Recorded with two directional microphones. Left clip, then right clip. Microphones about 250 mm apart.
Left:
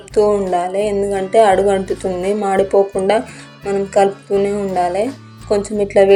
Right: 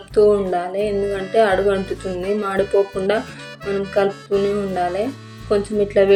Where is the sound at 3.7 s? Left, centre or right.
Centre.